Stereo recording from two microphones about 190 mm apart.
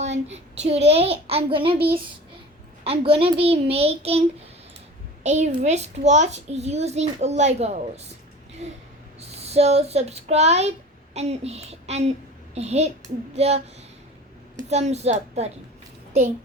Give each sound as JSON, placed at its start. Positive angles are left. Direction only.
{"t": 0.0, "sound": "a child's voice", "side_deg": -35}
{"t": 2.8, "sound": "a child's voice", "side_deg": -30}
{"t": 5.2, "sound": "a woman's voice", "side_deg": -40}
{"t": 14.7, "sound": "a child's voice", "side_deg": -35}